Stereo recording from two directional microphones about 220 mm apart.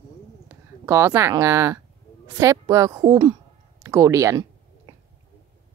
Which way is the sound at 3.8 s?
15° right (ahead or behind).